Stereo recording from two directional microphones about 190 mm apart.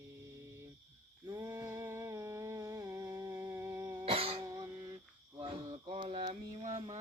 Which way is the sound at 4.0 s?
30° right (ahead or behind).